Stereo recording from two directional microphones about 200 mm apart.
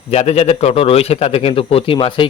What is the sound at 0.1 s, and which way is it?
A man's voice, 35° left (ahead or behind).